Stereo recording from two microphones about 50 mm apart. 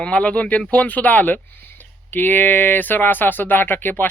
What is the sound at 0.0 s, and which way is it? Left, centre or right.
Speech, left.